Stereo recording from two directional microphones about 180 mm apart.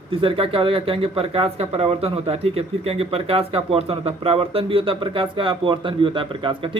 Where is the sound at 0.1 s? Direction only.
30° right (ahead or behind).